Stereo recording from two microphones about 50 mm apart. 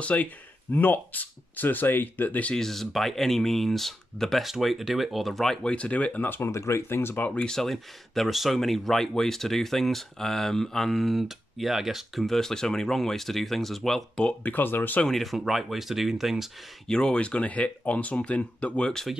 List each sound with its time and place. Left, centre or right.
0.0 s speech: left
2.5 s speech: centre
5.6 s speech: left
6.2 s speech: left
6.5 s speech: left
6.9 s speech: left
7.3 s speech: centre
7.7 s speech: centre
12.4 s speech: centre
14.4 s speech: left
15.0 s speech: centre
16.8 s speech: centre